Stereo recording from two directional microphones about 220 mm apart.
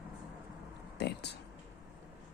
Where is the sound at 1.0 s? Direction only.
50° left (ahead or behind).